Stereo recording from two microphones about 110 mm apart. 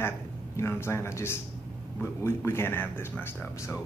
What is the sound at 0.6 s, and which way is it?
Speech, 25° left (ahead or behind).